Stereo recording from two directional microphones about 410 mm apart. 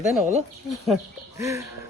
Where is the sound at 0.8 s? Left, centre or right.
Centre.